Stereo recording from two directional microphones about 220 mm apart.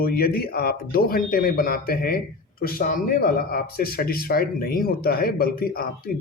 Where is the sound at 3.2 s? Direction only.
45° left (ahead or behind).